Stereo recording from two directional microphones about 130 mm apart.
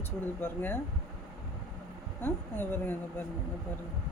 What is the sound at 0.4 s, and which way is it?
Speech, 15° left (ahead or behind).